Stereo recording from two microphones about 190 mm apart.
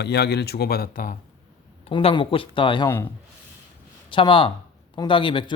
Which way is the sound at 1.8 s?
30° left (ahead or behind).